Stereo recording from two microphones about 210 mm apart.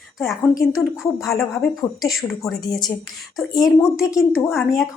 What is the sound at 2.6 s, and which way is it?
Speech, 20° left (ahead or behind).